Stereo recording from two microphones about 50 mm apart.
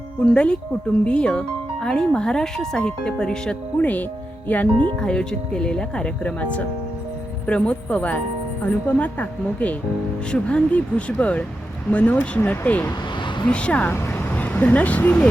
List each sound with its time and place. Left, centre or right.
0.3 s a woman's voice: left
3.8 s speech: left
4.9 s a woman's voice: centre; by 12.9 s left
13.5 s a woman's voice: left
14.1 s vehicle: left